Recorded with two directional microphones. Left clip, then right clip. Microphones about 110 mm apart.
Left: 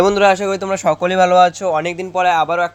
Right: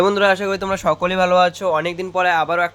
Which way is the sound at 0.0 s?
25° left (ahead or behind).